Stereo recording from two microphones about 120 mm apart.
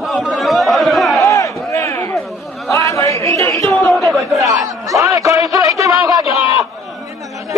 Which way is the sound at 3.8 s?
Centre (ahead or behind).